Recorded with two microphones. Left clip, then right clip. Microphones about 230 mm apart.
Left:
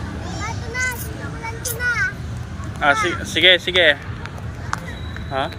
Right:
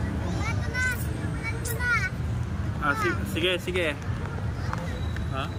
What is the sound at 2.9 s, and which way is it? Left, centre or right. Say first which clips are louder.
Speech: left 8 dB; left.